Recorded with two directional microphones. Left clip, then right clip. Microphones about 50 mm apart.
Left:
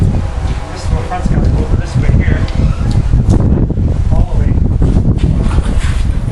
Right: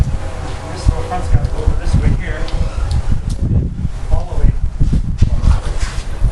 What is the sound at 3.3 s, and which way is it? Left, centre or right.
Wind noise, centre.